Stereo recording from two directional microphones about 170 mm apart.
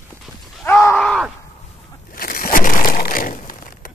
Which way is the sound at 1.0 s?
5° left (ahead or behind).